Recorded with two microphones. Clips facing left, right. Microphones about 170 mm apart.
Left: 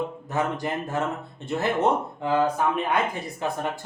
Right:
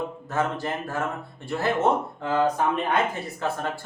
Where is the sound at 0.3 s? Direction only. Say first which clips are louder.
Right 1 dB; 15° left (ahead or behind).